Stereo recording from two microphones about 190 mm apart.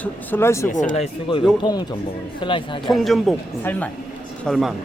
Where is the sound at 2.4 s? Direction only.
25° left (ahead or behind).